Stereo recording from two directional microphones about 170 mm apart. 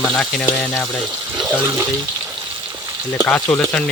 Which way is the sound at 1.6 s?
15° right (ahead or behind).